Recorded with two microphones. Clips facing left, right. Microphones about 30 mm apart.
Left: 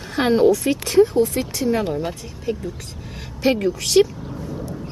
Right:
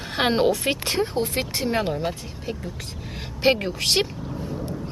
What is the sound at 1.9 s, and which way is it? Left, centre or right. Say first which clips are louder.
Speech: left 2 dB; centre.